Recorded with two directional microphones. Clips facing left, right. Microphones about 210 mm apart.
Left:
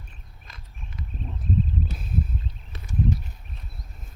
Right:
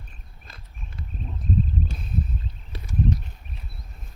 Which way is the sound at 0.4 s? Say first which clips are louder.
Even; 30° right (ahead or behind).